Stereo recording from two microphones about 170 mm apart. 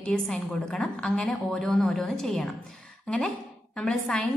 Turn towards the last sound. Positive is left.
turn(degrees=5)  # may be behind; listen again after turning